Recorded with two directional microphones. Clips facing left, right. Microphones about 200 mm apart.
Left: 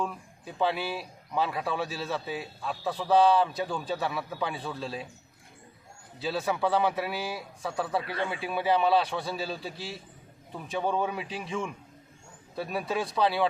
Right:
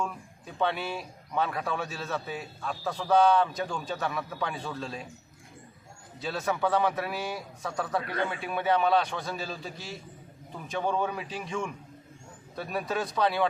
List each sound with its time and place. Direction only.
0.0 s a man's voice: 5° left (ahead or behind)
6.2 s a man's voice: centre (ahead or behind)
9.7 s a man's voice: 30° left (ahead or behind)
10.5 s a man's voice: centre (ahead or behind)